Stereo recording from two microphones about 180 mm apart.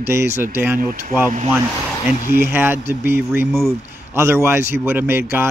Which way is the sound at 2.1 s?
50° left (ahead or behind).